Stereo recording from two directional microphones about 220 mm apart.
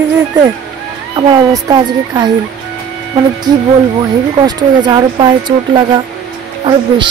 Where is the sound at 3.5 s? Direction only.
20° right (ahead or behind).